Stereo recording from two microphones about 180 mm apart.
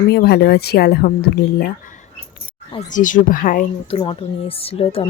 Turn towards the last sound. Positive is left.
turn(degrees=35)  # may be behind; listen again after turning